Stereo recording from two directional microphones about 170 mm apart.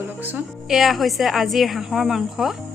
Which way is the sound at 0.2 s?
10° right (ahead or behind).